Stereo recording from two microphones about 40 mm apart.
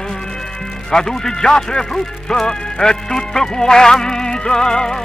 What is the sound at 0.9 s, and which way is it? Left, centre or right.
Music, centre.